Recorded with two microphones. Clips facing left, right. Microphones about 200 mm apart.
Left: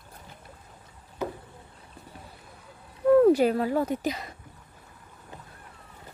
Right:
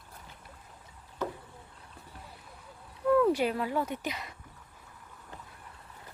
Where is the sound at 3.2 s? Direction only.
45° left (ahead or behind).